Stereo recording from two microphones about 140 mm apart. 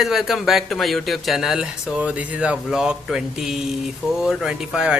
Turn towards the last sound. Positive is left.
turn(degrees=-5)  # may be behind; listen again after turning